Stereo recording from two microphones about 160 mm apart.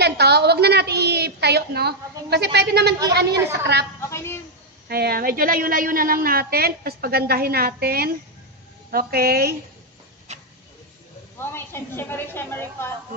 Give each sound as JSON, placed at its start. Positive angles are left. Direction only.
{"t": 0.0, "sound": "a woman's voice", "side_deg": -90}
{"t": 4.1, "sound": "a woman's voice", "side_deg": 15}
{"t": 4.8, "sound": "a woman's voice", "side_deg": -75}
{"t": 10.3, "sound": "vehicle", "side_deg": -45}
{"t": 11.3, "sound": "a woman's voice", "side_deg": 15}